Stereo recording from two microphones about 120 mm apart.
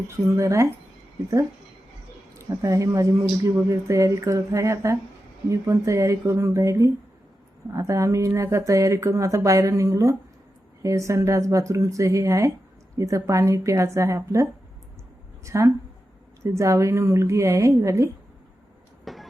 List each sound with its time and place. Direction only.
0.3 s speech: 25° right (ahead or behind)
2.6 s speech: 25° right (ahead or behind)
15.4 s speech: 25° right (ahead or behind)
19.0 s train: centre (ahead or behind)